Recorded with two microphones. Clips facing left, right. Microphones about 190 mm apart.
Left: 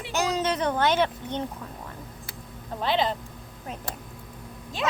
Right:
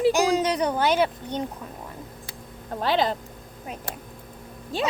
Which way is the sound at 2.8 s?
40° right (ahead or behind).